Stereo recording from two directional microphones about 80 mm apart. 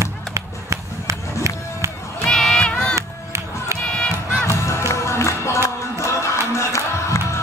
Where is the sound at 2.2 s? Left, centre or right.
Centre.